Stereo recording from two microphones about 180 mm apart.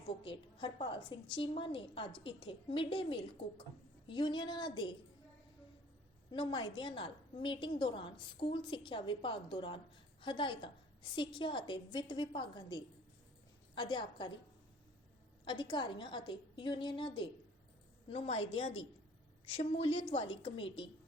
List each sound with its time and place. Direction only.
0.1 s a woman's voice: 30° left (ahead or behind)
6.3 s a woman's voice: 30° left (ahead or behind)
15.4 s a woman's voice: 25° left (ahead or behind)